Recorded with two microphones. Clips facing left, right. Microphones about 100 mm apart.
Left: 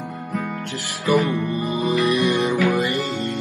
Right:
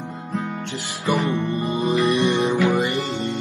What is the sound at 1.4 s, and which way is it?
Music, centre (ahead or behind).